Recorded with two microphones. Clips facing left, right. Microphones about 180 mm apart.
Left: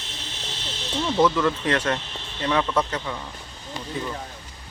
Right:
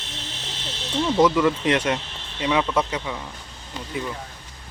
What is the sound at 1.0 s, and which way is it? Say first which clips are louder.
Speech: right 2 dB; 10° right (ahead or behind).